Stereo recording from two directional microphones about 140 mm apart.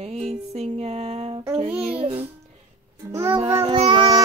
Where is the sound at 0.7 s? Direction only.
45° right (ahead or behind).